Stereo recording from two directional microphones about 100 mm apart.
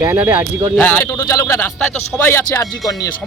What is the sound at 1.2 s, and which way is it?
A man's voice, 35° left (ahead or behind).